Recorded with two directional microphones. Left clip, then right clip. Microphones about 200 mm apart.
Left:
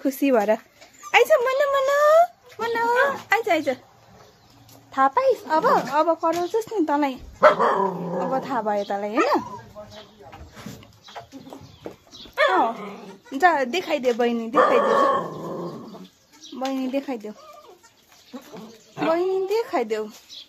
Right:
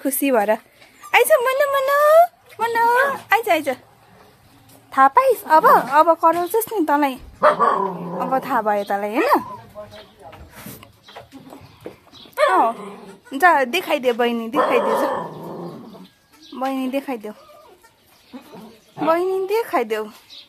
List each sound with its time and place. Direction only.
0.0 s speech: 10° left (ahead or behind)
1.1 s a sound: 10° left (ahead or behind)
4.9 s a woman's voice: 20° right (ahead or behind)
7.4 s speech: 15° left (ahead or behind)
8.2 s speech: 15° right (ahead or behind)
12.4 s dog: centre (ahead or behind)
13.3 s speech: 10° right (ahead or behind)
15.1 s dog: 20° left (ahead or behind)
16.5 s speech: 10° right (ahead or behind)
19.0 s speech: 10° right (ahead or behind)